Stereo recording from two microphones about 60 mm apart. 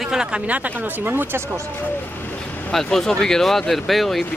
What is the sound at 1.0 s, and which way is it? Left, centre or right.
Speech, right.